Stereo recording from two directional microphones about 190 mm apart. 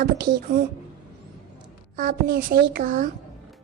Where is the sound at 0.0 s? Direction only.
55° right (ahead or behind).